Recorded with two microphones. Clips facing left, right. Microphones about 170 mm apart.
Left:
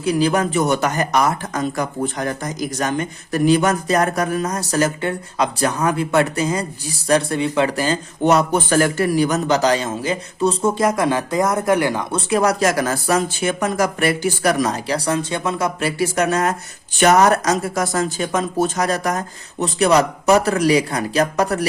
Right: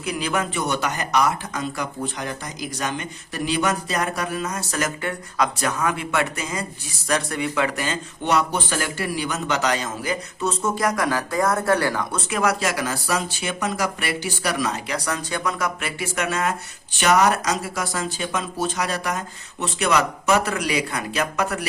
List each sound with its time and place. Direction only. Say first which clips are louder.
0.0 s a man's voice: left 8 dB; 35° left (ahead or behind)
12.3 s speech: left 6 dB; 35° left (ahead or behind)